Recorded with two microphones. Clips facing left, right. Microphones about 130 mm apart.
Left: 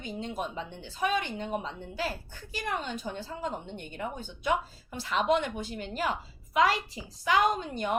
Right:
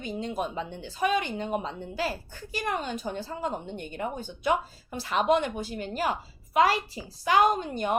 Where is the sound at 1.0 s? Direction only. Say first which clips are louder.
Right 3 dB; 70° right (ahead or behind).